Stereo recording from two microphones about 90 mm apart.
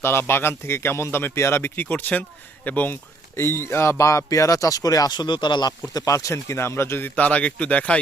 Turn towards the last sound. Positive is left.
turn(degrees=15)  # may be behind; listen again after turning